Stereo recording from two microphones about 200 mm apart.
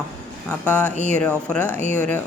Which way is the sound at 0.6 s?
10° left (ahead or behind).